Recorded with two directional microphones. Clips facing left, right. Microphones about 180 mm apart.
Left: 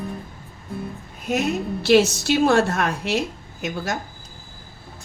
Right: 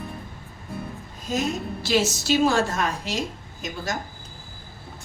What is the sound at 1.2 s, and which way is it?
Speech, 65° left (ahead or behind).